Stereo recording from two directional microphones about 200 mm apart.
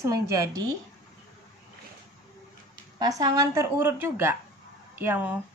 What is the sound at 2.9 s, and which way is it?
A woman's voice, 20° right (ahead or behind).